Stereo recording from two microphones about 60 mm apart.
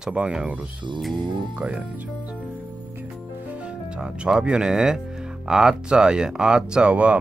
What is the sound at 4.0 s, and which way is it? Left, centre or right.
Speech, centre.